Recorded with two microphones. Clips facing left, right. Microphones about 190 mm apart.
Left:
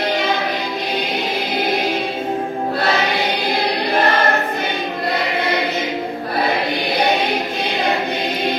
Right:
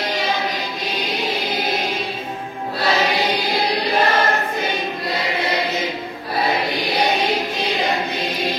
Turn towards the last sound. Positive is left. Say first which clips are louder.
# left 1 dB
turn(degrees=55)  # may be behind; listen again after turning